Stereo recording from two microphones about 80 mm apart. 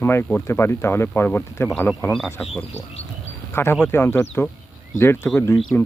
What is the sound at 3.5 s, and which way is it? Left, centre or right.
Speech, left.